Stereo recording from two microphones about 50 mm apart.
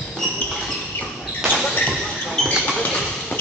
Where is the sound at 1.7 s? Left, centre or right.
Centre.